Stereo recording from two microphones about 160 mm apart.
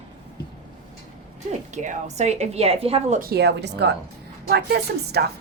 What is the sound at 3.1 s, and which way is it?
A woman's voice, 75° right (ahead or behind).